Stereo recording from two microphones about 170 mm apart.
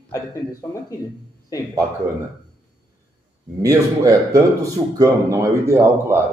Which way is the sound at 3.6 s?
20° right (ahead or behind).